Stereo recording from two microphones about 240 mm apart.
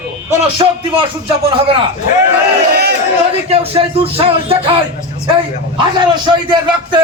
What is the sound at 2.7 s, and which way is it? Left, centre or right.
Speech, right.